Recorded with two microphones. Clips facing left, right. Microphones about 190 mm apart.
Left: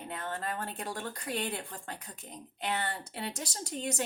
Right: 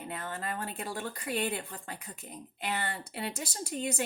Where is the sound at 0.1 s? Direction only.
5° right (ahead or behind).